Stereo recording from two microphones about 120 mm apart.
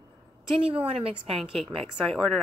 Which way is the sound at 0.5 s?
50° right (ahead or behind).